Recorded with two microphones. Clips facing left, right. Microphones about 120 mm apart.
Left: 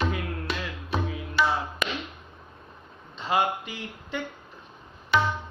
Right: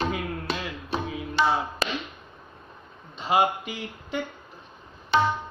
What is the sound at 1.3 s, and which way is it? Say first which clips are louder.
Music: right 2 dB; 25° right (ahead or behind).